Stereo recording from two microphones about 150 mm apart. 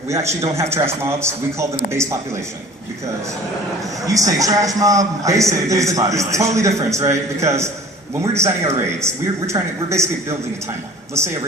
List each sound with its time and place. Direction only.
0.1 s a man's voice: 20° right (ahead or behind)
4.0 s a man's voice: 20° right (ahead or behind)